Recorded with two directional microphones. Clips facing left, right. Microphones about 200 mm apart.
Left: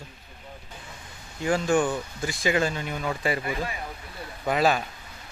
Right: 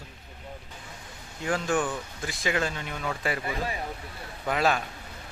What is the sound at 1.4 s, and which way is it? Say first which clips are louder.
Speech: left 4 dB; centre (ahead or behind).